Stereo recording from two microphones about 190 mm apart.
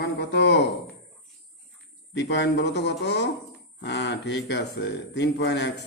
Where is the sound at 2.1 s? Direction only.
65° left (ahead or behind).